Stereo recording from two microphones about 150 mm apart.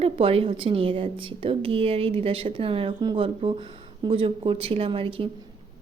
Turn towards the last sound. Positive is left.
turn(degrees=-35)  # may be behind; listen again after turning